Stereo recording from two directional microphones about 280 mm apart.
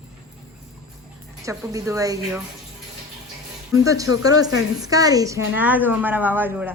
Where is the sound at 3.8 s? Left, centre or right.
Centre.